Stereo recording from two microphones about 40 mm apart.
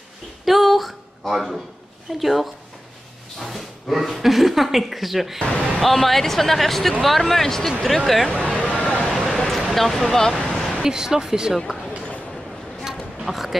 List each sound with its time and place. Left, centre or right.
0.5 s a sound: centre
2.1 s speech: centre
8.3 s a sound: left
9.3 s speech: centre
10.7 s speech: centre
11.5 s speech: centre
13.2 s speech: centre